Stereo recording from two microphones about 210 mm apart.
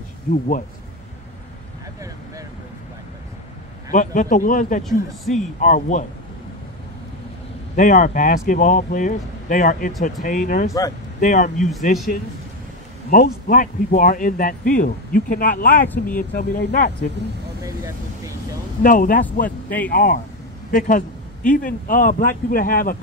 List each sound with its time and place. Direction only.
0.3 s speech: 40° left (ahead or behind)
3.9 s speech: 40° left (ahead or behind)
7.7 s speech: 40° left (ahead or behind)
13.1 s speech: 40° left (ahead or behind)
18.8 s speech: 40° left (ahead or behind)
19.4 s speech: 5° left (ahead or behind)
19.9 s speech: 45° left (ahead or behind)